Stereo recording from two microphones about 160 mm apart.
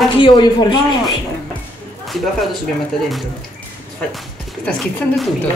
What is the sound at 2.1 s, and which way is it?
Speech, centre (ahead or behind).